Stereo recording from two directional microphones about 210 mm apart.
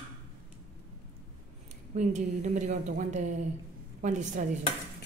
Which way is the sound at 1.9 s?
35° right (ahead or behind).